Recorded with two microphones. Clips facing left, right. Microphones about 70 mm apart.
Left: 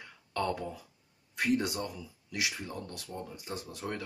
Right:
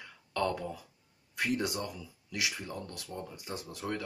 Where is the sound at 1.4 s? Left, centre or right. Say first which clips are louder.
Left 2 dB; left.